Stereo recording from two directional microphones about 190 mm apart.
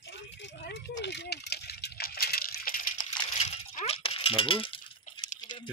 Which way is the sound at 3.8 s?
30° left (ahead or behind).